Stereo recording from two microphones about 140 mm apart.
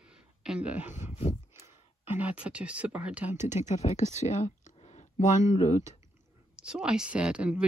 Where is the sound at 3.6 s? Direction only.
55° left (ahead or behind).